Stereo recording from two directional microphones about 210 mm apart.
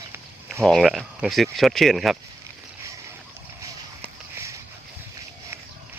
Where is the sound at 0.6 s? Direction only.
Centre (ahead or behind).